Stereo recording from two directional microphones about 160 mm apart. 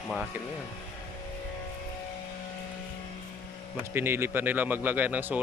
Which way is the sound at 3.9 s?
15° right (ahead or behind).